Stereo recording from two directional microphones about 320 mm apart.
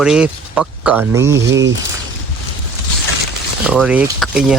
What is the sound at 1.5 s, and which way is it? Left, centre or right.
Speech, right.